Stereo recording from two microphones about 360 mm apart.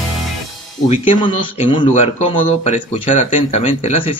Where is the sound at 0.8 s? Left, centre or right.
Centre.